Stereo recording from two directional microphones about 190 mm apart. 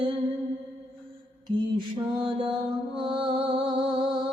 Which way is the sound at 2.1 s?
25° right (ahead or behind).